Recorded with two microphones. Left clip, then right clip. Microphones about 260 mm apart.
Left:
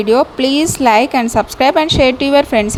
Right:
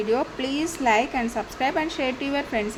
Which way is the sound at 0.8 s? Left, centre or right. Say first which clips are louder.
Left 10 dB; left.